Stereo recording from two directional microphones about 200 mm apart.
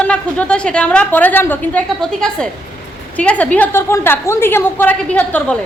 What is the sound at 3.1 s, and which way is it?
A woman's voice, 5° left (ahead or behind).